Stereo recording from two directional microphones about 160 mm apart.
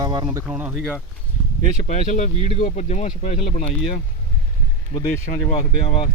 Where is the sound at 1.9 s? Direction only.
50° left (ahead or behind).